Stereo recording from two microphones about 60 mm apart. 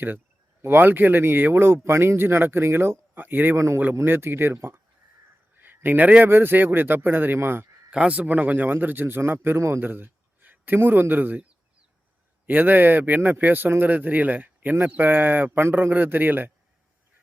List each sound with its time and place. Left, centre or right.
0.6 s speech: right
3.2 s speech: right
7.9 s a man's voice: right
12.5 s speech: right